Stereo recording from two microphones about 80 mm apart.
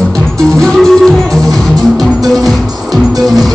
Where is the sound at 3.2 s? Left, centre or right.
Centre.